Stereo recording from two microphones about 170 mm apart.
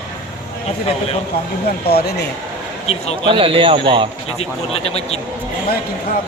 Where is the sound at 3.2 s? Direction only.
35° right (ahead or behind).